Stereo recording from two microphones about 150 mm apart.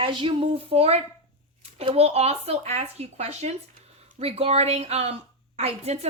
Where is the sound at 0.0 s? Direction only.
35° right (ahead or behind).